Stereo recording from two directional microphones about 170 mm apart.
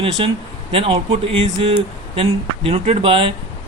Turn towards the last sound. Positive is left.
turn(degrees=-30)  # may be behind; listen again after turning